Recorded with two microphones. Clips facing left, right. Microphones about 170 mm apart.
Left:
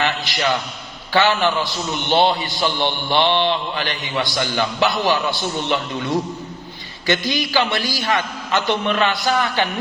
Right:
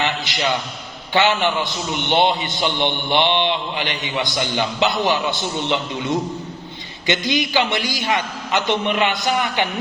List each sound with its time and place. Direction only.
0.0 s a man's voice: 20° right (ahead or behind)